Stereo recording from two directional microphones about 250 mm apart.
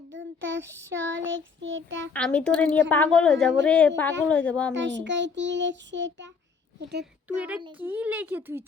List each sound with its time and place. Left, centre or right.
0.1 s child singing: right
2.1 s a child's voice: centre
4.7 s child singing: right
7.0 s speech: centre